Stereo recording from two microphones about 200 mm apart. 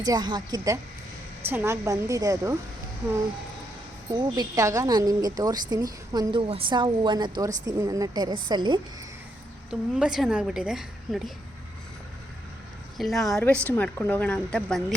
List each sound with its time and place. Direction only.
0.0 s a woman's voice: 20° right (ahead or behind)
4.1 s a woman's voice: 20° right (ahead or behind)
9.6 s a woman's voice: 5° right (ahead or behind)
13.0 s a woman's voice: centre (ahead or behind)